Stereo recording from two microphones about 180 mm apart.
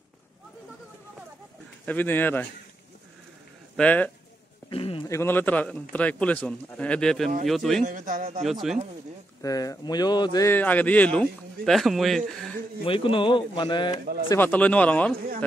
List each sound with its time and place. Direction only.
1.9 s speech: 10° left (ahead or behind)
3.7 s speech: 10° left (ahead or behind)
4.6 s a sound: 30° left (ahead or behind)
5.0 s a man's voice: 15° left (ahead or behind)
7.8 s a man's voice: 45° right (ahead or behind)
8.5 s a man's voice: centre (ahead or behind)
9.4 s speech: 20° left (ahead or behind); by 12.2 s centre (ahead or behind)
12.8 s speech: 30° left (ahead or behind)
14.3 s speech: 10° left (ahead or behind)